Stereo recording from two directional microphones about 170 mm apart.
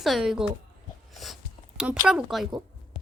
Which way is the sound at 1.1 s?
Centre (ahead or behind).